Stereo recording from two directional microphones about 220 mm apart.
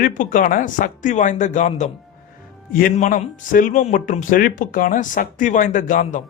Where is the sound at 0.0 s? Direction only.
40° left (ahead or behind).